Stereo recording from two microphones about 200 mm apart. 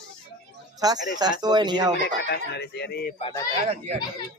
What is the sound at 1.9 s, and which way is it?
Speech, 55° left (ahead or behind).